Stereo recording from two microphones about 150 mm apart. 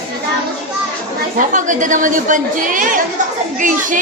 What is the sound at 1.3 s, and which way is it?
A woman's voice, 60° right (ahead or behind).